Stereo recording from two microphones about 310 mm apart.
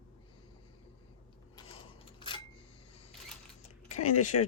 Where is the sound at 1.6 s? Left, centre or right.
Centre.